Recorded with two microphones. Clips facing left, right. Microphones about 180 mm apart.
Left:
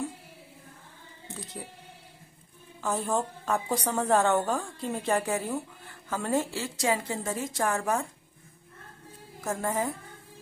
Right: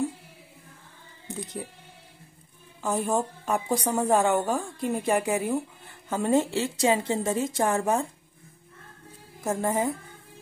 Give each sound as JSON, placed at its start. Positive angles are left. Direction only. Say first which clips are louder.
{"t": 1.3, "sound": "music", "louder": "right 6 dB", "side_deg": -15}
{"t": 2.8, "sound": "a woman's voice", "louder": "right 3 dB", "side_deg": -15}
{"t": 9.4, "sound": "a woman's voice", "louder": "right 4 dB", "side_deg": -20}